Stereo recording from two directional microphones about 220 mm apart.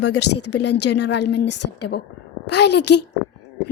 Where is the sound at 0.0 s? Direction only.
50° left (ahead or behind).